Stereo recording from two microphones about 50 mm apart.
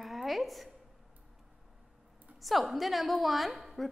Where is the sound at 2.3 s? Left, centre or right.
Centre.